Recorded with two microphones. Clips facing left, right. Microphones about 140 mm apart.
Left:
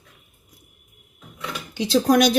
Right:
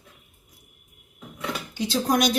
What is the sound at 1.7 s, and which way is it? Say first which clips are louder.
Speech: left 6 dB; 80° left.